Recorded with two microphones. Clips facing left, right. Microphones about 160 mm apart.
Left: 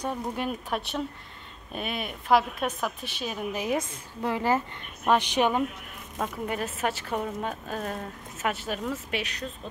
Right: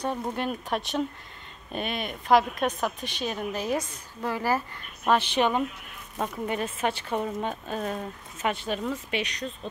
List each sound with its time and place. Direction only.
0.2 s speech: 5° left (ahead or behind)
3.7 s a woman's voice: 25° left (ahead or behind)
6.1 s speech: centre (ahead or behind)